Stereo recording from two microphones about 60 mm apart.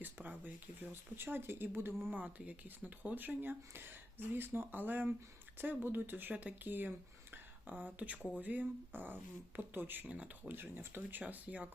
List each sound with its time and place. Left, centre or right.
0.0 s speech: right
2.1 s speech: right
11.2 s speech: right